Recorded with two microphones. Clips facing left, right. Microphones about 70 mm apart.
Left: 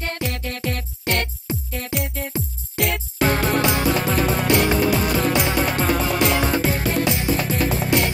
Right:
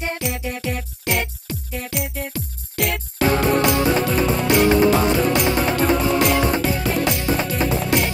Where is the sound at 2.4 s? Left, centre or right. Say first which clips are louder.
Left 2 dB; right.